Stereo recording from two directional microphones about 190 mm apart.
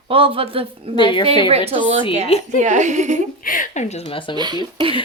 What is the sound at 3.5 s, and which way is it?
Speech, 45° left (ahead or behind).